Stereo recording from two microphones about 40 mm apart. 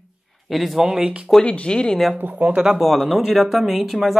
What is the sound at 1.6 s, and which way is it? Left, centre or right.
Speech, left.